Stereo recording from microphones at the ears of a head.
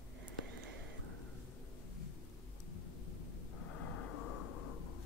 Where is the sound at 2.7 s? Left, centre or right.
Left.